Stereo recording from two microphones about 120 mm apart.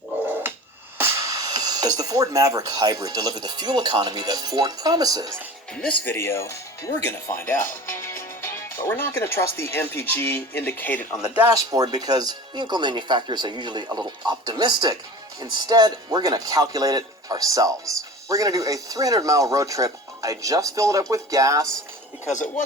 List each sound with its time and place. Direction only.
0.4 s finger snapping: 20° right (ahead or behind)
0.9 s speech: 20° right (ahead or behind)
5.7 s speech: 5° left (ahead or behind)
6.1 s speech: 20° left (ahead or behind)
11.5 s speech: 30° right (ahead or behind)